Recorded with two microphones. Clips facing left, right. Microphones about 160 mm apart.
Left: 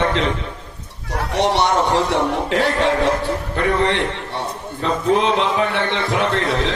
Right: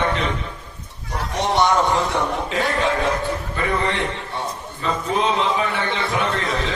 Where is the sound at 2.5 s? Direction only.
70° left (ahead or behind).